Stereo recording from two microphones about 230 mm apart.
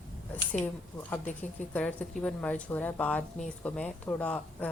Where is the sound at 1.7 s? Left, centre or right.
Centre.